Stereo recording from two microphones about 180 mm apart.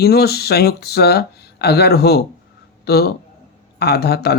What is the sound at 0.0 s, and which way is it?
Speech, 60° left (ahead or behind).